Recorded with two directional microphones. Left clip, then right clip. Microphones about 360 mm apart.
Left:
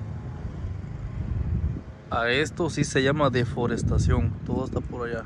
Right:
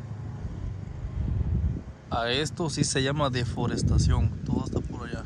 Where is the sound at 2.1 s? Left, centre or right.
Centre.